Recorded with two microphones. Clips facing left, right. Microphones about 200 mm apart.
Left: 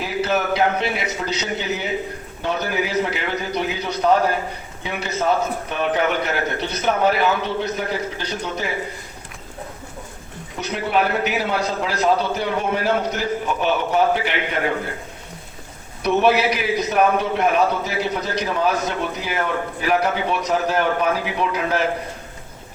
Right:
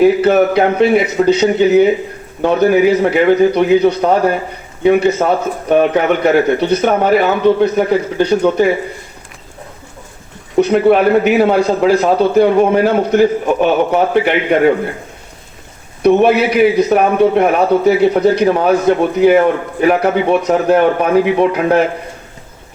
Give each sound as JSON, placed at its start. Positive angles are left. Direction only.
{"t": 0.0, "sound": "a man's voice", "side_deg": -55}
{"t": 10.6, "sound": "a man's voice", "side_deg": -55}
{"t": 16.0, "sound": "a man's voice", "side_deg": -55}